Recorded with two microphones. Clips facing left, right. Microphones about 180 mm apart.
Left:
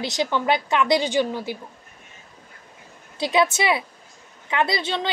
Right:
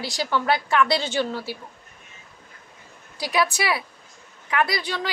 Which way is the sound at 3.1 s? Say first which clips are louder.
Left 3 dB; 25° left (ahead or behind).